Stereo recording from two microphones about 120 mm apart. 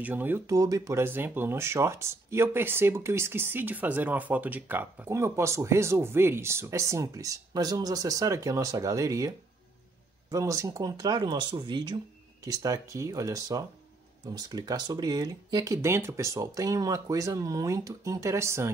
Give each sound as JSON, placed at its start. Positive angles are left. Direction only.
{"t": 0.0, "sound": "speech", "side_deg": -15}
{"t": 0.5, "sound": "speech", "side_deg": -30}
{"t": 10.3, "sound": "speech", "side_deg": -25}
{"t": 12.4, "sound": "speech", "side_deg": -30}